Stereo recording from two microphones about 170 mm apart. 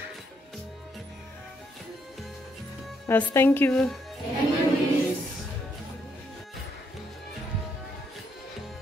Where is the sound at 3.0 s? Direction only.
15° left (ahead or behind).